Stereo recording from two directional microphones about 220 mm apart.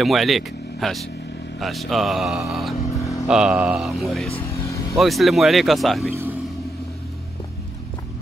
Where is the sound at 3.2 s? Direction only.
5° right (ahead or behind).